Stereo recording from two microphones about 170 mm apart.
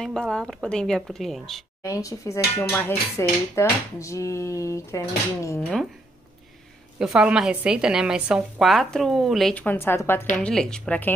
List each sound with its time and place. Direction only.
0.0 s a woman's voice: 5° left (ahead or behind)
1.8 s dishes: 20° left (ahead or behind)
7.0 s a woman's voice: 5° right (ahead or behind)